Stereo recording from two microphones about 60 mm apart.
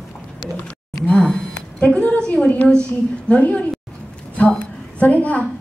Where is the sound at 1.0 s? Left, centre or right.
Centre.